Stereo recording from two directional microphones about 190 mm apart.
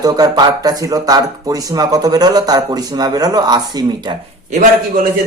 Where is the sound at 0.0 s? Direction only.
20° right (ahead or behind).